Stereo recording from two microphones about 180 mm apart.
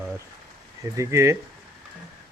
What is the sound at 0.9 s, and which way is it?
Speech, 15° right (ahead or behind).